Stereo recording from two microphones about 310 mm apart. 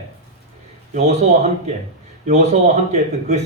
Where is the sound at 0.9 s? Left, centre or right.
Right.